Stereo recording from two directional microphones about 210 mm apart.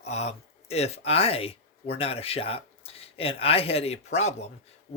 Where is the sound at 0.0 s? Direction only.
30° left (ahead or behind).